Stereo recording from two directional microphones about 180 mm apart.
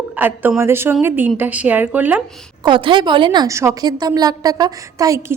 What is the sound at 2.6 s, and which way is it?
A woman's voice, 25° right (ahead or behind).